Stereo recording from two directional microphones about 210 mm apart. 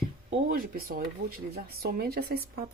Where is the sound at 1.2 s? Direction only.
55° right (ahead or behind).